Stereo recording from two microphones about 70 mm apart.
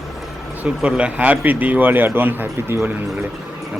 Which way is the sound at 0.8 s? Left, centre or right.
Centre.